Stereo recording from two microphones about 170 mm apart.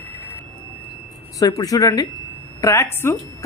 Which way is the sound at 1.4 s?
20° left (ahead or behind).